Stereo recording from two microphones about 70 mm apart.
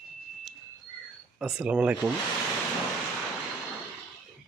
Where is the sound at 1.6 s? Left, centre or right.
Centre.